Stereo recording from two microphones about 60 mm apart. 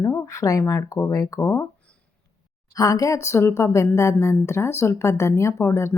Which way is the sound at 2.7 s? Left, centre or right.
Left.